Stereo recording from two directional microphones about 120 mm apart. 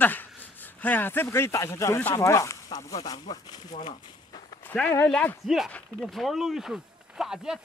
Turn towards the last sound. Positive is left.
turn(degrees=-5)  # may be behind; listen again after turning